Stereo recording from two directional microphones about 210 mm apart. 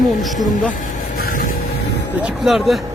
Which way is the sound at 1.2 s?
40° left (ahead or behind).